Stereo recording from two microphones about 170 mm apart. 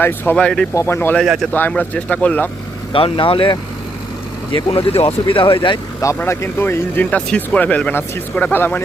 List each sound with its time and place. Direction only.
0.0 s speech: 10° left (ahead or behind)
1.2 s speech: centre (ahead or behind)
1.5 s speech: 10° left (ahead or behind)
2.9 s speech: 30° left (ahead or behind); by 8.8 s 10° left (ahead or behind)